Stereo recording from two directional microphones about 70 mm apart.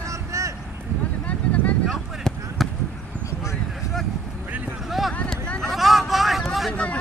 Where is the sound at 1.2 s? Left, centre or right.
Left.